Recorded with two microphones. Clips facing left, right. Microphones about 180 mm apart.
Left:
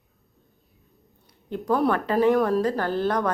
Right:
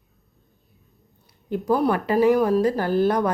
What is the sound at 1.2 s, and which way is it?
Speech, 10° right (ahead or behind).